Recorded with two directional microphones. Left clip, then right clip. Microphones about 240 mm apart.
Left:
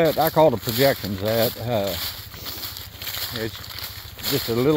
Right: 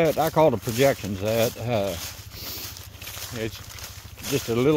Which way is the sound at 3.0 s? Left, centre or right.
Left.